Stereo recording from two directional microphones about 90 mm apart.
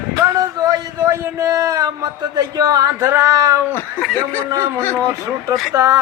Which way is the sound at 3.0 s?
30° right (ahead or behind).